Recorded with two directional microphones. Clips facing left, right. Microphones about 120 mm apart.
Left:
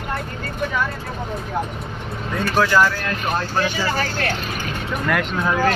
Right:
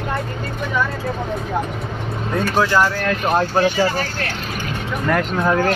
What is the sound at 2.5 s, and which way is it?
Speech, 20° right (ahead or behind).